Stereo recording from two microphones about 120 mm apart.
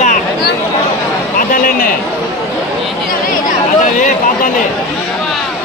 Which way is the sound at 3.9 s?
90° left.